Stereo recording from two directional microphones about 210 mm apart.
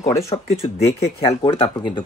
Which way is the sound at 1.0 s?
25° left (ahead or behind).